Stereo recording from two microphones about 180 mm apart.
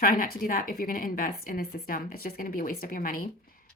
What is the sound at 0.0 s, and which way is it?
A woman's voice, 50° left (ahead or behind).